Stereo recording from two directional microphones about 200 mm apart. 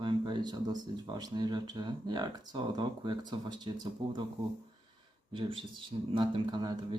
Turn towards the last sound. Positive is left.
turn(degrees=-20)  # may be behind; listen again after turning